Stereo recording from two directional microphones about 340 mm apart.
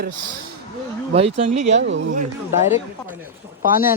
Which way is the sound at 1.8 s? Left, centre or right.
Right.